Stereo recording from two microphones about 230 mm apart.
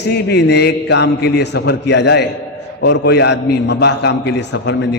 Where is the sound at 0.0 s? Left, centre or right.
Left.